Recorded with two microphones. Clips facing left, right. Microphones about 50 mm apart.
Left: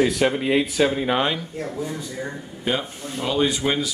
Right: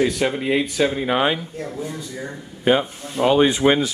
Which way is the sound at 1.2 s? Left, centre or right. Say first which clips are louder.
Right 3 dB; centre.